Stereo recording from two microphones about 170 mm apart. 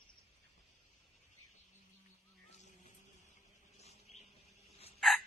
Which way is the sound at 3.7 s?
40° left (ahead or behind).